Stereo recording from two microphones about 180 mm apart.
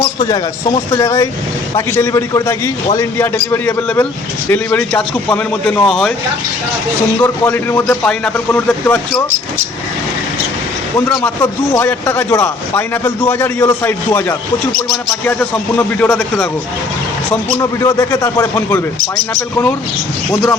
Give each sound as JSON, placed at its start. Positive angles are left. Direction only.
{"t": 0.9, "sound": "a man's voice", "side_deg": 20}
{"t": 7.2, "sound": "a man's voice", "side_deg": 10}
{"t": 11.7, "sound": "a man's voice", "side_deg": 15}
{"t": 17.6, "sound": "a man's voice", "side_deg": 15}